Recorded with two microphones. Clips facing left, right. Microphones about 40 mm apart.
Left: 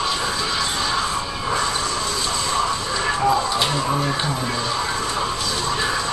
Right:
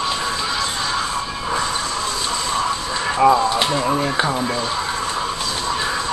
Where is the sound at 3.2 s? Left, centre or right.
Right.